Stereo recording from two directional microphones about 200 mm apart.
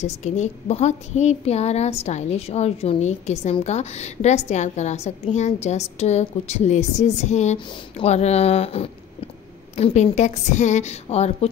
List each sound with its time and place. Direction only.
0.0 s a woman's voice: 35° left (ahead or behind)